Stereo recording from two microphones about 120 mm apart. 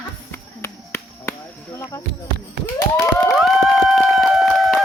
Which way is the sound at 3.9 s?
Centre (ahead or behind).